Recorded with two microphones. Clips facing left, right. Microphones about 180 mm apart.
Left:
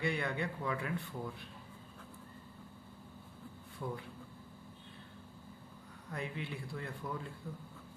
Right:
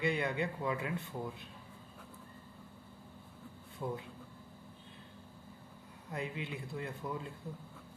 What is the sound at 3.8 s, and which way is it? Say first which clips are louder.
Speech: right 2 dB; 25° right (ahead or behind).